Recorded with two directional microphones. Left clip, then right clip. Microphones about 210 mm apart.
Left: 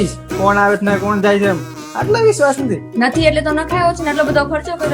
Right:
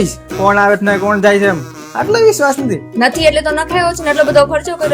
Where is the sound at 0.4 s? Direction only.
35° right (ahead or behind).